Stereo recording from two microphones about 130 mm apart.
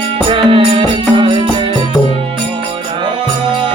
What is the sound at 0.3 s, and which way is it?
Music, 45° right (ahead or behind).